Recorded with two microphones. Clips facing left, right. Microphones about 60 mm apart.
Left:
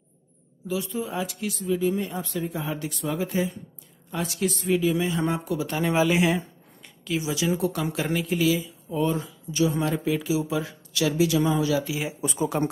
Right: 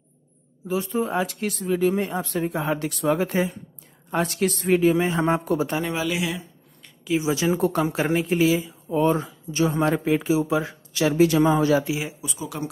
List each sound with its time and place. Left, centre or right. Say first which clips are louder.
0.7 s speech: right 4 dB; right
5.9 s speech: left 5 dB; left
7.2 s speech: right 4 dB; right
12.2 s speech: left 7 dB; left